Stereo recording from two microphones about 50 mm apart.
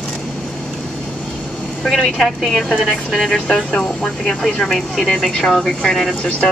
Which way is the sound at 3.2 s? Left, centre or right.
Centre.